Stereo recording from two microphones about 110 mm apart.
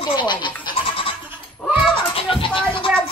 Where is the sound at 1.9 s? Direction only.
50° left (ahead or behind).